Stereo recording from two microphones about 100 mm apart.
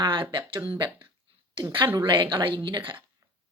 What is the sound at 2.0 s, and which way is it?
Speech, 50° right (ahead or behind).